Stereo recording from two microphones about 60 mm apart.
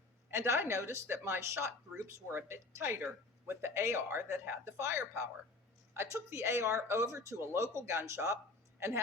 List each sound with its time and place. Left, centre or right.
0.3 s speech: right